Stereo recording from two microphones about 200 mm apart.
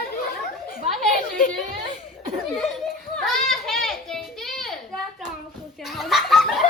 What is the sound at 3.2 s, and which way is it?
Children playing, centre (ahead or behind).